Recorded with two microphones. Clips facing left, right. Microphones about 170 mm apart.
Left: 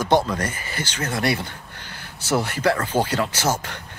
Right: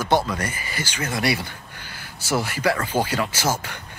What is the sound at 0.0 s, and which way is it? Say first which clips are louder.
Speech: left 2 dB; 10° right (ahead or behind).